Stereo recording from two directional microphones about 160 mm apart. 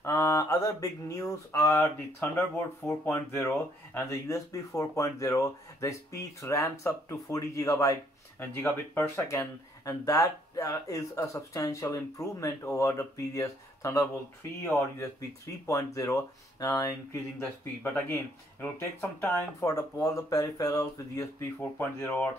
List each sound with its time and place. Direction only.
0.0 s speech: 20° left (ahead or behind)
19.2 s speech: 20° left (ahead or behind)